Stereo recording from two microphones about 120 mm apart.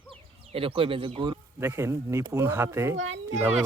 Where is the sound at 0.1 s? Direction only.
50° right (ahead or behind).